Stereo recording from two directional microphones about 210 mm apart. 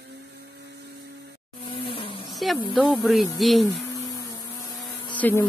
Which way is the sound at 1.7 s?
25° left (ahead or behind).